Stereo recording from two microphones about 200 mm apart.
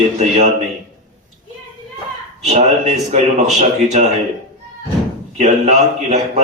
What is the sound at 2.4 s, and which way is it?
A man's voice, 35° right (ahead or behind).